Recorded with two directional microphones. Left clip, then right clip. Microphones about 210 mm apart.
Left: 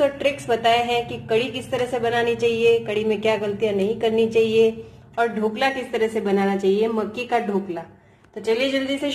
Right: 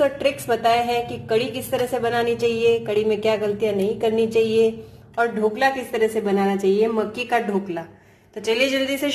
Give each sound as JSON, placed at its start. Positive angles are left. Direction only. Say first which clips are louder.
{"t": 0.0, "sound": "speech", "louder": "even", "side_deg": 0}